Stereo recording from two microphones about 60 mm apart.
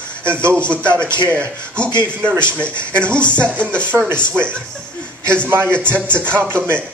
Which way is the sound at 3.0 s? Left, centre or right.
Left.